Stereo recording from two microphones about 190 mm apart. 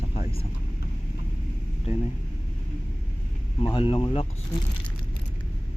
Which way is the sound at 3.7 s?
30° left (ahead or behind).